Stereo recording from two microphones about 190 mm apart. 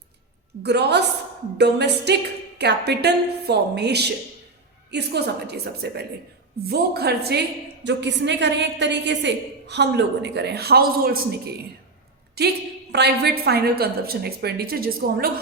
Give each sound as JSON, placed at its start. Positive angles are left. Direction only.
{"t": 0.6, "sound": "a woman's voice", "side_deg": -60}
{"t": 12.4, "sound": "a woman's voice", "side_deg": -55}